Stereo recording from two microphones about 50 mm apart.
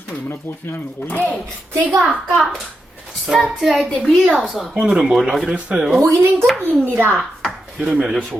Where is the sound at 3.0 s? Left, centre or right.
Centre.